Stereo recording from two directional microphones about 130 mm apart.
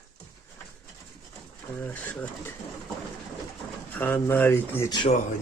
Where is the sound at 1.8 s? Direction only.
10° left (ahead or behind).